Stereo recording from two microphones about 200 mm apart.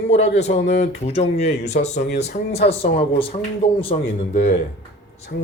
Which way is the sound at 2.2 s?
30° left (ahead or behind).